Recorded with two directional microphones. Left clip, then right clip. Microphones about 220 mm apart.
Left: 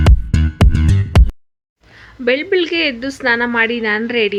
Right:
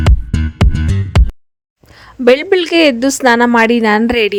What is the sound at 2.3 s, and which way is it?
A woman's voice, 60° right (ahead or behind).